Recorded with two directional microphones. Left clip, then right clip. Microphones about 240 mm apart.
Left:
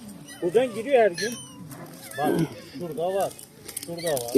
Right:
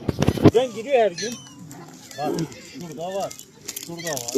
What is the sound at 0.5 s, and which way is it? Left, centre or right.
Speech, centre.